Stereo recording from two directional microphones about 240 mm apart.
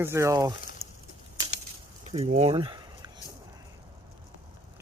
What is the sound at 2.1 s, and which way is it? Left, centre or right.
Speech, right.